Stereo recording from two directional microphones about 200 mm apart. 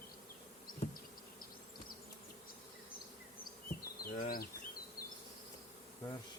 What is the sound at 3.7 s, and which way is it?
Bee, 45° left (ahead or behind).